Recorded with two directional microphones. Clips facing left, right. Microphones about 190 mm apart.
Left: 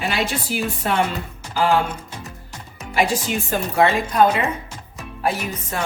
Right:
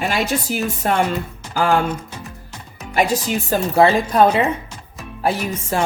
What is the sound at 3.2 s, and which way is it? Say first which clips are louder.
A woman's voice: right 3 dB; 35° right (ahead or behind).